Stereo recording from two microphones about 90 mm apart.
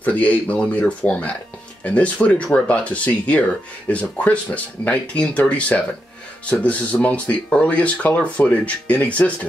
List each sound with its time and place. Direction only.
0.0 s speech: 15° left (ahead or behind)